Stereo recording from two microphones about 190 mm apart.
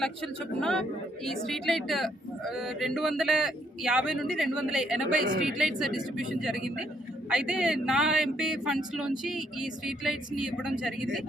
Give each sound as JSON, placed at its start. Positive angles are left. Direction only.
{"t": 0.6, "sound": "speech", "side_deg": 5}
{"t": 5.2, "sound": "speech", "side_deg": -45}
{"t": 5.5, "sound": "speech", "side_deg": 0}